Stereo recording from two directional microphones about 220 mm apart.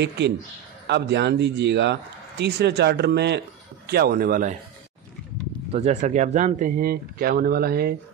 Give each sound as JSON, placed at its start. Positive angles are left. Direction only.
{"t": 0.8, "sound": "speech", "side_deg": -50}
{"t": 5.7, "sound": "speech", "side_deg": -30}